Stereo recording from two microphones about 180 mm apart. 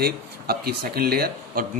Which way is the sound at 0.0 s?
60° right (ahead or behind).